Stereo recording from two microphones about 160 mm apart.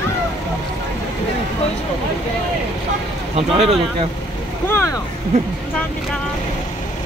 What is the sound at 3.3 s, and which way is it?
Speech, 40° right (ahead or behind).